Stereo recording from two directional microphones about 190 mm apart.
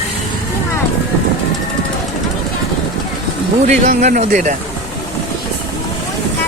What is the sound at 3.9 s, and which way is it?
Speech, 40° right (ahead or behind).